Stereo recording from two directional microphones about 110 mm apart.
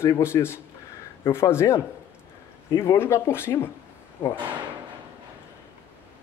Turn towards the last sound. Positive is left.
turn(degrees=20)  # may be behind; listen again after turning